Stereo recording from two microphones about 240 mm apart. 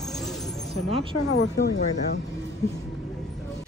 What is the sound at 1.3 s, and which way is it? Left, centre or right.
Speech, left.